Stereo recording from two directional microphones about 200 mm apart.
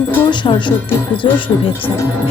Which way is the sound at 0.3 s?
25° left (ahead or behind).